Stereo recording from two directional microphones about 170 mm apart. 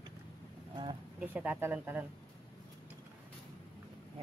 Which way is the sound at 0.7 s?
30° right (ahead or behind).